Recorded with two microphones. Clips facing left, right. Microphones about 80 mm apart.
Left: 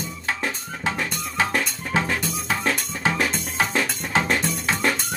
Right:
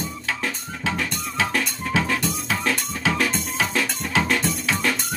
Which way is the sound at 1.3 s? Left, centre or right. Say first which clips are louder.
Left 1 dB; left.